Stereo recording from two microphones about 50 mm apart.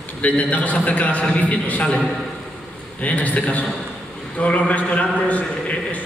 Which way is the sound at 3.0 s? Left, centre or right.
Left.